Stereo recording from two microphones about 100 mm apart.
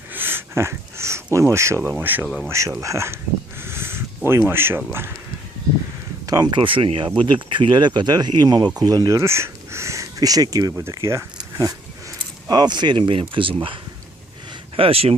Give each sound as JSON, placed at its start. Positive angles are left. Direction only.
{"t": 0.1, "sound": "a sound", "side_deg": -20}
{"t": 2.0, "sound": "speech", "side_deg": -20}
{"t": 2.5, "sound": "speech", "side_deg": -30}
{"t": 3.6, "sound": "a sound", "side_deg": -25}
{"t": 4.9, "sound": "speech", "side_deg": -25}
{"t": 6.2, "sound": "speech", "side_deg": -40}
{"t": 11.6, "sound": "speech", "side_deg": -40}
{"t": 14.8, "sound": "speech", "side_deg": -70}